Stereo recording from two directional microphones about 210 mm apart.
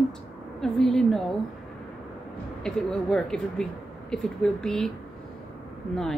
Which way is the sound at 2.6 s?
5° left (ahead or behind).